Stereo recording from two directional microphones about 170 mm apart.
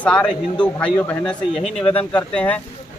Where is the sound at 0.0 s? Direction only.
5° left (ahead or behind).